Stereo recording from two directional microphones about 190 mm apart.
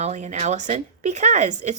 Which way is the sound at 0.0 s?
35° right (ahead or behind).